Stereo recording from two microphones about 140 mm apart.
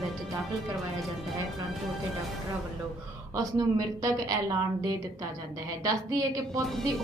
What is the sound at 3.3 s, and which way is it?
A woman's voice, 25° right (ahead or behind).